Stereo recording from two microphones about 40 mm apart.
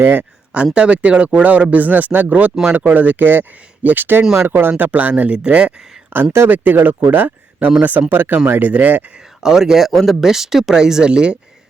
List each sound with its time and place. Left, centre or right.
0.0 s speech: right
0.5 s speech: right
4.9 s speech: right
5.5 s speech: right
6.1 s speech: right
8.1 s speech: right
8.5 s speech: right
9.1 s speech: centre
9.9 s speech: centre
10.2 s speech: centre